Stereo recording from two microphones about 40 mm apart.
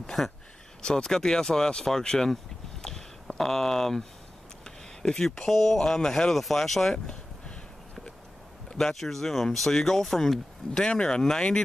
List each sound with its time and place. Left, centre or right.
0.8 s speech: centre
3.3 s speech: centre
8.7 s speech: centre